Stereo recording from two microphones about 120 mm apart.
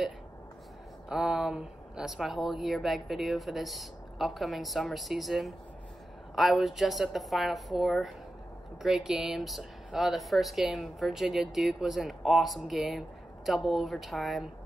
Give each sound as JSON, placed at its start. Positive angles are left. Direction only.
{"t": 1.0, "sound": "speech", "side_deg": -5}